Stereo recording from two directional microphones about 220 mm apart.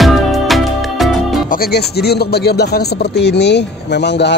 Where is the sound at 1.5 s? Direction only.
45° left (ahead or behind).